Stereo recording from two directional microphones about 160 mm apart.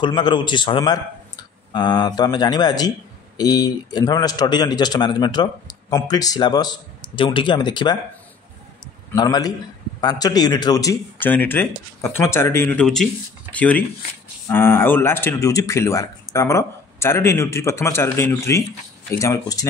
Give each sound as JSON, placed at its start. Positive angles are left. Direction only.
{"t": 0.0, "sound": "a man's voice", "side_deg": 30}
{"t": 9.1, "sound": "a man's voice", "side_deg": 25}